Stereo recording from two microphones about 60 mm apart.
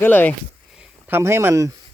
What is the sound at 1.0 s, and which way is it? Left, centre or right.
Speech, right.